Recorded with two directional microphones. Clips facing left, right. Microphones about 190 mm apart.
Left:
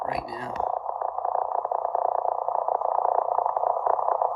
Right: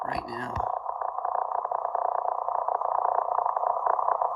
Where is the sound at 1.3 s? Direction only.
20° left (ahead or behind).